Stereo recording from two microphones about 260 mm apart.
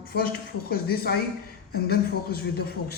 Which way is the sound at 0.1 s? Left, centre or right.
Left.